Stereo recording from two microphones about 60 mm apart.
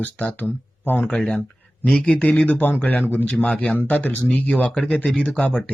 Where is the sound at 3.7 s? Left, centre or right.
Left.